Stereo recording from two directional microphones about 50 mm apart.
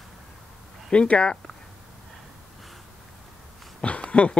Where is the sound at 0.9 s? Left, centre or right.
Left.